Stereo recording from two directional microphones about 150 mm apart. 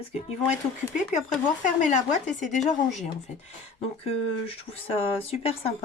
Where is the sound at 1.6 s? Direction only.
55° left (ahead or behind).